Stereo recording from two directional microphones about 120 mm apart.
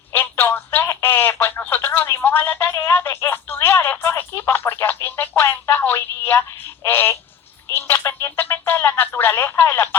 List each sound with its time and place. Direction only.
0.1 s telephone: 15° left (ahead or behind)
6.8 s a sound: 15° left (ahead or behind)
7.8 s music: 20° left (ahead or behind)